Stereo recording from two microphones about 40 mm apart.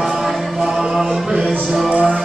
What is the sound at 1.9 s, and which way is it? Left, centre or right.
Music, right.